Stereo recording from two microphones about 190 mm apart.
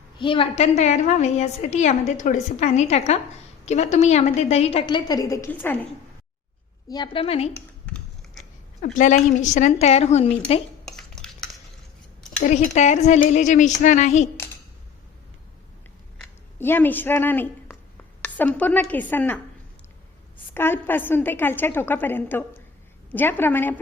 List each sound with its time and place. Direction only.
0.2 s a woman's voice: 25° left (ahead or behind); by 5.8 s 10° left (ahead or behind)
6.8 s a woman's voice: 20° left (ahead or behind)
7.5 s computer keyboard: 5° left (ahead or behind)
8.8 s a woman's voice: 40° left (ahead or behind)
10.8 s dishes: 5° left (ahead or behind)
12.4 s a woman's voice: 40° left (ahead or behind)
16.1 s a woman's voice: 5° left (ahead or behind)
20.5 s a woman's voice: 10° left (ahead or behind)